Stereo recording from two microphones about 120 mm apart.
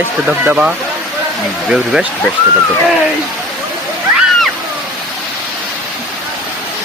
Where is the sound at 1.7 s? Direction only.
5° right (ahead or behind).